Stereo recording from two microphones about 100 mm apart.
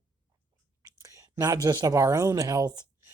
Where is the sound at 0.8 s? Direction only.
30° right (ahead or behind).